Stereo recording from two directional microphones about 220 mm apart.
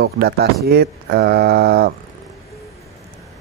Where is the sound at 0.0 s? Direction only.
45° right (ahead or behind).